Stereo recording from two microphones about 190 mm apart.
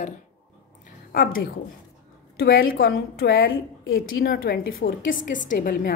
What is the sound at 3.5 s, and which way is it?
Speech, 90° left.